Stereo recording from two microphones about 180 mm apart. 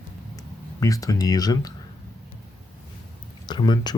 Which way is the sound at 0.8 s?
20° left (ahead or behind).